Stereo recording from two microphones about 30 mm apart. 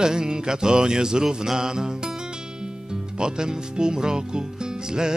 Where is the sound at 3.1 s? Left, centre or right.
Right.